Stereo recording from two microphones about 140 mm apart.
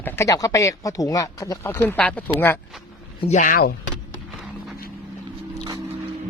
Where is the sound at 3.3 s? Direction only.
75° left (ahead or behind).